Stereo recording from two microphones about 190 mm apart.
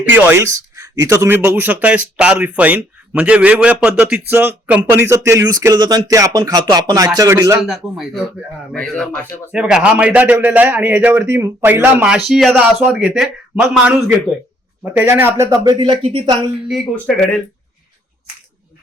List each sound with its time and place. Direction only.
0.0 s speech: 10° right (ahead or behind)
7.7 s a man's voice: centre (ahead or behind)
14.9 s speech: 10° right (ahead or behind)
16.6 s a man's voice: centre (ahead or behind)